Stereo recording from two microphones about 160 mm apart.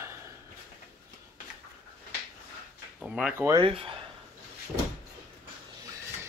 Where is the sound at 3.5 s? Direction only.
30° right (ahead or behind).